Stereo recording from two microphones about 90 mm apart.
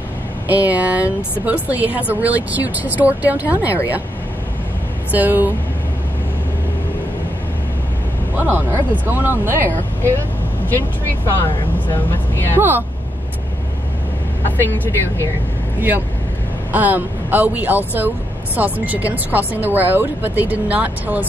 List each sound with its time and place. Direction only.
0.5 s speech: 15° right (ahead or behind)
5.1 s speech: 20° right (ahead or behind)
8.4 s speech: 20° right (ahead or behind)
11.3 s speech: 25° left (ahead or behind)
12.5 s speech: 20° right (ahead or behind)
16.7 s speech: 20° right (ahead or behind)